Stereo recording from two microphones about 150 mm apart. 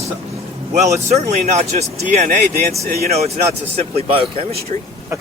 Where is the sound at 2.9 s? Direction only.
90° right.